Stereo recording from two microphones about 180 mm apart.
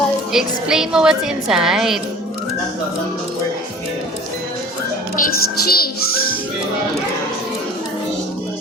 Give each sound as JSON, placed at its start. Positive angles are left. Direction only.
{"t": 0.3, "sound": "a woman's voice", "side_deg": -5}
{"t": 5.1, "sound": "a child's voice", "side_deg": 55}